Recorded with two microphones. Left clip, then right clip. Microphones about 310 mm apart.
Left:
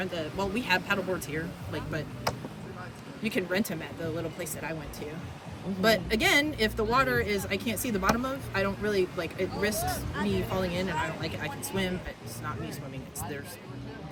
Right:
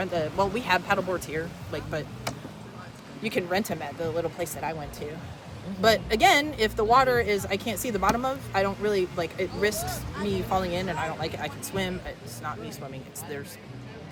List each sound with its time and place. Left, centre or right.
0.0 s speech: centre
2.3 s a sound: left
3.2 s speech: centre